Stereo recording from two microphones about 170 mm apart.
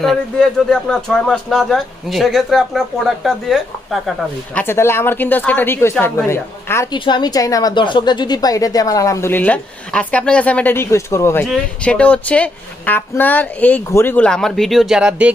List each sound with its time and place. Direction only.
0.0 s speech: centre (ahead or behind)
4.6 s a woman's voice: 15° left (ahead or behind)
11.4 s a woman's voice: 5° left (ahead or behind)